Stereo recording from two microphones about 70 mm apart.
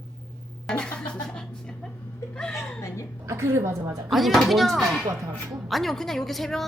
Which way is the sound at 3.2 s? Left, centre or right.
Right.